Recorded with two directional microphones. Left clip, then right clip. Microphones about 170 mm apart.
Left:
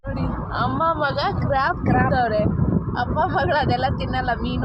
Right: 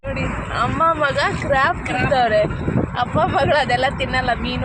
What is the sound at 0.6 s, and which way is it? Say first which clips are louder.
Vehicle: right 4 dB; 25° right (ahead or behind).